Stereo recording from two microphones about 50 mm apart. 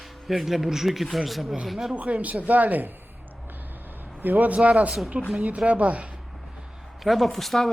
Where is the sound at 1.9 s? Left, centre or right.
Right.